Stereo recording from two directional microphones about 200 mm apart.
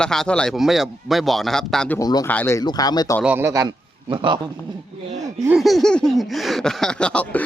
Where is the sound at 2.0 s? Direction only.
20° left (ahead or behind).